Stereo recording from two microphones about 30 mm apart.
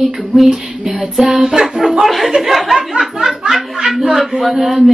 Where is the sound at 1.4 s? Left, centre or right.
Right.